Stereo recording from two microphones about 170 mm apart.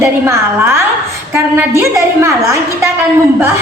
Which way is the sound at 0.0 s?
15° right (ahead or behind).